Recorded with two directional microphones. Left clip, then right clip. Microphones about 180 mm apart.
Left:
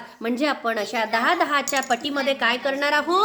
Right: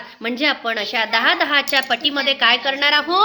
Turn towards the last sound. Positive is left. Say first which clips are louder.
# right 5 dB
turn(degrees=0)  # may be behind; listen again after turning